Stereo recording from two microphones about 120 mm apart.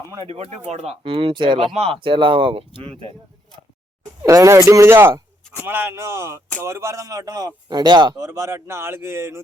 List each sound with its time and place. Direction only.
0.3 s speech: 60° right (ahead or behind); by 1.7 s 45° right (ahead or behind)
1.7 s speech: 55° right (ahead or behind)
4.2 s a man's voice: 25° right (ahead or behind)